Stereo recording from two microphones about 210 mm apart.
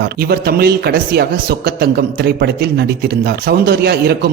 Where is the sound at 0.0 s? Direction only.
50° right (ahead or behind).